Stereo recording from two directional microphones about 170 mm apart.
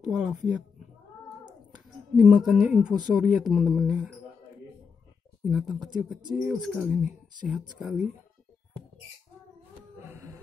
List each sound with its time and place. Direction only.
0.1 s a woman's voice: 5° right (ahead or behind)
1.9 s speech: 5° right (ahead or behind)
5.4 s speech: centre (ahead or behind)
10.0 s a sound: 15° right (ahead or behind)